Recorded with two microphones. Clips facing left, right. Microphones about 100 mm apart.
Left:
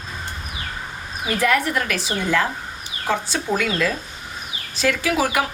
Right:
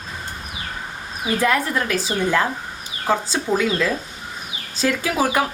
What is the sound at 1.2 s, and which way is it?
A woman's voice, 25° right (ahead or behind).